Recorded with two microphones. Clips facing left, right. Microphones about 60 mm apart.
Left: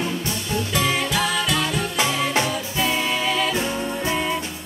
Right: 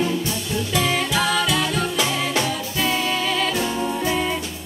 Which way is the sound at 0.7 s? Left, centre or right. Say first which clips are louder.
Right 1 dB; centre.